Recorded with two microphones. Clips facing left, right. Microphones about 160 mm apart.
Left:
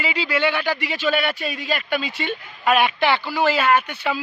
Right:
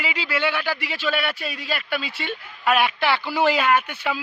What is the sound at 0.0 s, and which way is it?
Speech, 5° right (ahead or behind).